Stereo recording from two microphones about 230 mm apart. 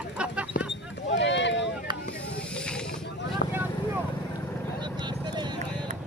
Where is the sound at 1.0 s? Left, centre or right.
Left.